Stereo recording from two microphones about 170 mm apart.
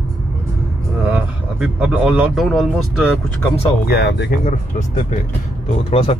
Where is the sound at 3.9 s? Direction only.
75° left (ahead or behind).